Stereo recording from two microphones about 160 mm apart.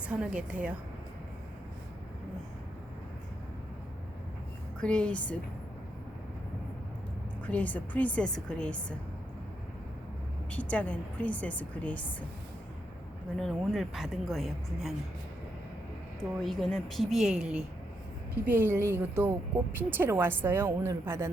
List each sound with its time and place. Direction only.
0.1 s a woman's voice: 5° right (ahead or behind)
4.8 s a woman's voice: 5° left (ahead or behind)
7.4 s a woman's voice: 10° left (ahead or behind)
10.5 s a woman's voice: 10° left (ahead or behind)
13.3 s speech: 5° left (ahead or behind)
16.4 s a woman's voice: centre (ahead or behind); by 21.2 s 15° right (ahead or behind)